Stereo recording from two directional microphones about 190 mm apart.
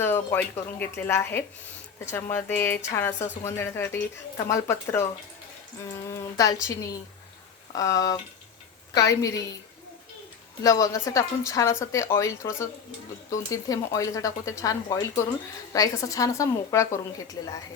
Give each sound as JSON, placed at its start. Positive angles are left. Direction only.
{"t": 0.0, "sound": "a woman's voice", "side_deg": 10}
{"t": 10.6, "sound": "a woman's voice", "side_deg": 20}